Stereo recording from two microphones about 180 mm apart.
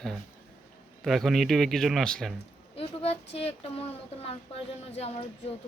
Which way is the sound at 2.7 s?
35° left (ahead or behind).